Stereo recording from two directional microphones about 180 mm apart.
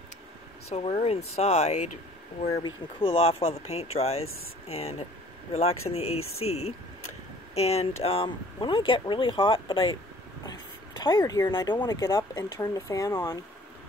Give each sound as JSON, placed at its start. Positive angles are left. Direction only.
{"t": 0.7, "sound": "speech", "side_deg": 35}
{"t": 2.5, "sound": "speech", "side_deg": 30}
{"t": 11.0, "sound": "speech", "side_deg": 20}